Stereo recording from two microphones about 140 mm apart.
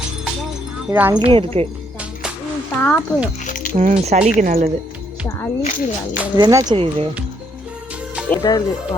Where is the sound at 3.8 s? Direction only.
55° right (ahead or behind).